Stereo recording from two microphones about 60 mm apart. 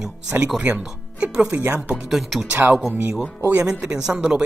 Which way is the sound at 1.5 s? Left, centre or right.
Right.